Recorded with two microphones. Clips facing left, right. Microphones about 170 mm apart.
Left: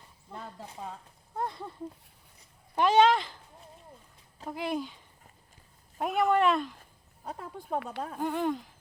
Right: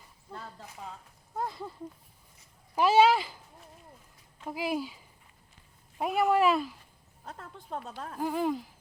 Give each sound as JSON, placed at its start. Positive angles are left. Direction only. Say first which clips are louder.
{"t": 0.6, "sound": "speech", "louder": "left 3 dB", "side_deg": 25}
{"t": 1.4, "sound": "speech", "louder": "even", "side_deg": 0}
{"t": 2.7, "sound": "speech", "louder": "even", "side_deg": -5}
{"t": 4.4, "sound": "speech", "louder": "right 1 dB", "side_deg": -5}
{"t": 7.7, "sound": "speech", "louder": "left 5 dB", "side_deg": 65}
{"t": 8.2, "sound": "speech", "louder": "right 1 dB", "side_deg": 0}